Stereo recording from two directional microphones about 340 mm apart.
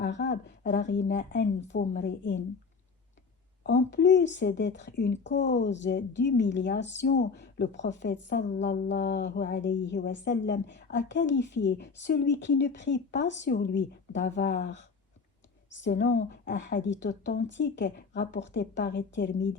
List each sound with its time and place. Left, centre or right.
0.0 s a woman's voice: left
1.7 s a woman's voice: left
2.0 s a woman's voice: left
3.6 s a woman's voice: left